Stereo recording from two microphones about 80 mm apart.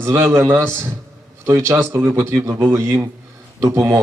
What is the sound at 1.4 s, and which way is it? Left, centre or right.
A man's voice, right.